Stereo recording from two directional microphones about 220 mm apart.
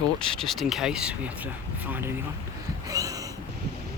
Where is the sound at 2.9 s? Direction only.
15° right (ahead or behind).